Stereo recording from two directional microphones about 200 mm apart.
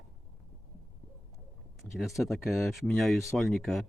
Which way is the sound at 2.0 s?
Centre (ahead or behind).